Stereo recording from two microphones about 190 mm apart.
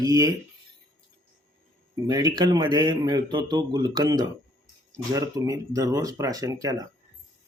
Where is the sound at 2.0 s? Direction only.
20° right (ahead or behind).